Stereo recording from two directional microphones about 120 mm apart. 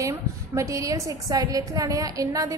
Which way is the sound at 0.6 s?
25° right (ahead or behind).